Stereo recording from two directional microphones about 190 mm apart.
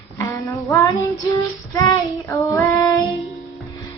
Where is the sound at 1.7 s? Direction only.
15° left (ahead or behind).